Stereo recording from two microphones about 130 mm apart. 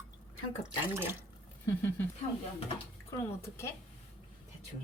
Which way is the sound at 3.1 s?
20° left (ahead or behind).